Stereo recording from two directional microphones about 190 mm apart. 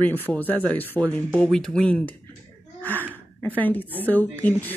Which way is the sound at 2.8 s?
10° left (ahead or behind).